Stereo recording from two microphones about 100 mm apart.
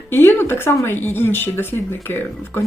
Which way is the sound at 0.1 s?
20° left (ahead or behind).